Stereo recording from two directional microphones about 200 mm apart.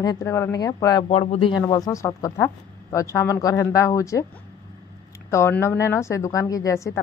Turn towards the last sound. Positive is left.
turn(degrees=15)  # may be behind; listen again after turning